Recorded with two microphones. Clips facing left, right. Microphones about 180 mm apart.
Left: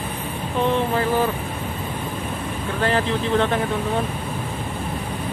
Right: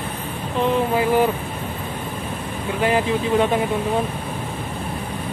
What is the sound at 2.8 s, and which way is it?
Speech, 10° right (ahead or behind).